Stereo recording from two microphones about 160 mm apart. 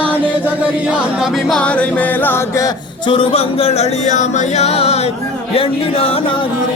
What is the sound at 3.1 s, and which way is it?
Music, 35° left (ahead or behind).